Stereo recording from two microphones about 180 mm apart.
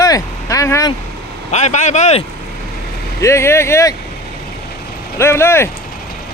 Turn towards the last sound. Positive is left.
turn(degrees=15)  # may be behind; listen again after turning